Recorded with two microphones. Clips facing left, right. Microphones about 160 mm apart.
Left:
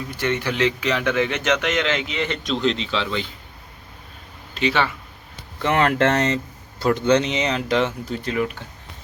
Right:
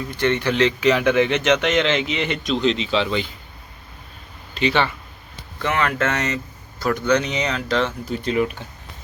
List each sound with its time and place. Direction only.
0.1 s speech: 10° left (ahead or behind)
0.8 s a man's voice: 5° right (ahead or behind)
1.0 s a man's voice: 20° right (ahead or behind)
2.4 s speech: centre (ahead or behind); by 3.2 s 15° right (ahead or behind)
4.5 s speech: centre (ahead or behind)
5.6 s speech: 35° left (ahead or behind); by 7.9 s 20° left (ahead or behind)
8.1 s a man's voice: 20° right (ahead or behind)